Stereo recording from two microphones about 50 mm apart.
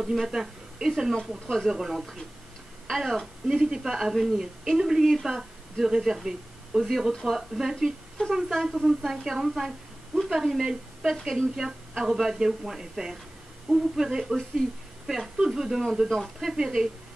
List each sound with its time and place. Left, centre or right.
0.0 s a woman's voice: centre
8.2 s speech: centre
8.7 s a woman's voice: centre